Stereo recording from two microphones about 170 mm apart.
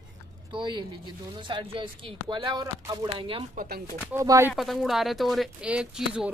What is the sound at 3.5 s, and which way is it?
Speech, 65° right (ahead or behind).